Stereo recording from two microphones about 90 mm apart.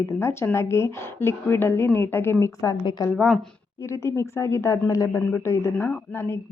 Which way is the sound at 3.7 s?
35° left (ahead or behind).